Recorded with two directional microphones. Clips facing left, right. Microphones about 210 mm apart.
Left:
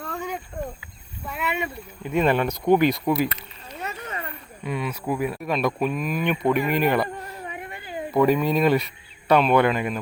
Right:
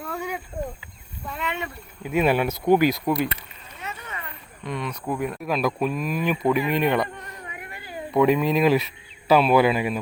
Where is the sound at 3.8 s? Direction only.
40° left (ahead or behind).